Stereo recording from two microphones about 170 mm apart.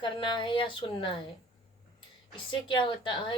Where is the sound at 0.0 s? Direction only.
30° left (ahead or behind).